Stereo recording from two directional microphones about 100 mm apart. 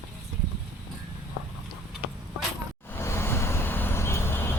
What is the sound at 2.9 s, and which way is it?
Vehicle, 25° left (ahead or behind).